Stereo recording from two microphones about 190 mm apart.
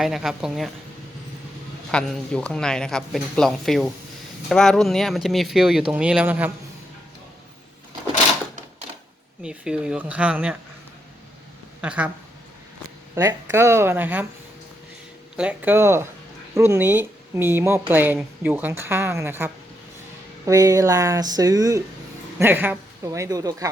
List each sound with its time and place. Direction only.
0.0 s speech: centre (ahead or behind)
1.9 s speech: 5° left (ahead or behind)
9.4 s speech: 5° right (ahead or behind)
11.8 s speech: 5° right (ahead or behind)
13.1 s speech: 15° right (ahead or behind)
15.4 s speech: 10° right (ahead or behind)